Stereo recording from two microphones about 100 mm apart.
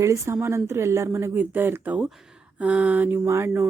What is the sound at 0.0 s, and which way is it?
Speech, 30° right (ahead or behind).